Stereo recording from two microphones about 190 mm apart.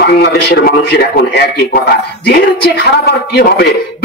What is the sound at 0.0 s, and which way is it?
A man's voice, 60° left (ahead or behind).